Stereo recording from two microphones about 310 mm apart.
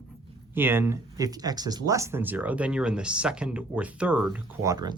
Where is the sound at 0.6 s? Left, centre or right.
Centre.